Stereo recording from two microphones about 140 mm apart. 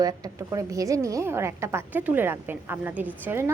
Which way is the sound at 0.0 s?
25° right (ahead or behind).